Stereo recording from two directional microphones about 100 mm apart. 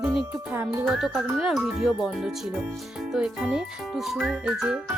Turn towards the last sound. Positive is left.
turn(degrees=-10)  # may be behind; listen again after turning